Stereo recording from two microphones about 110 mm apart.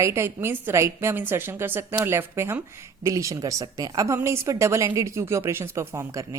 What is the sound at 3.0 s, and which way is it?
A woman's voice, 30° right (ahead or behind).